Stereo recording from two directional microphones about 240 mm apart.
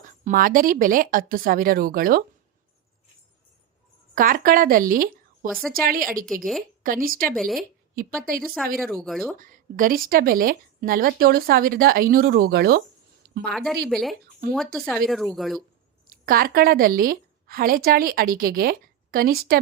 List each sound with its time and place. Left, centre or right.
0.3 s a woman's voice: right
4.1 s a woman's voice: right
6.2 s speech: centre
6.8 s a woman's voice: right
7.3 s speech: centre
7.9 s a woman's voice: right
8.8 s speech: centre
9.4 s a woman's voice: right
13.5 s speech: centre
16.0 s a woman's voice: right